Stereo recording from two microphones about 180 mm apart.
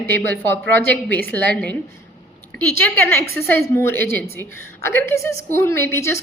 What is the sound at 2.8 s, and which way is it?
A woman's voice, 10° left (ahead or behind).